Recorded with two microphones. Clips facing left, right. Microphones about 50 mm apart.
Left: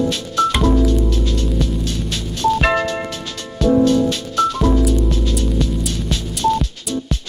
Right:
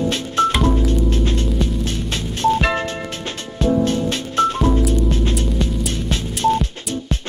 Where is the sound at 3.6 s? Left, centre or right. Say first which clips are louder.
Left 4 dB; right.